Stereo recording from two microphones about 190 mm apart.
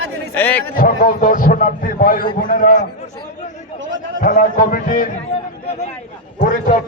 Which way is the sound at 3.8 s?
85° right.